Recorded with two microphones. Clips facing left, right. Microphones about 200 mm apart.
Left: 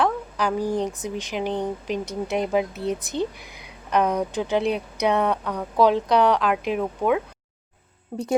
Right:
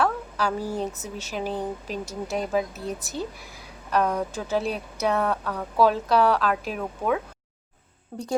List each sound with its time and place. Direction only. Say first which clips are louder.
0.0 s speech: left 2 dB; 15° left (ahead or behind)